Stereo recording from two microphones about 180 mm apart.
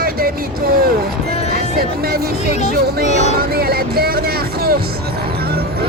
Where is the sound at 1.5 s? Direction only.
55° right (ahead or behind).